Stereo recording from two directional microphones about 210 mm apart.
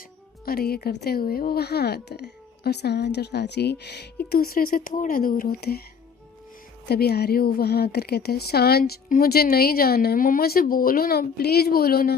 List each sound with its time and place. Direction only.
0.4 s speech: 45° left (ahead or behind)
6.8 s speech: 50° left (ahead or behind)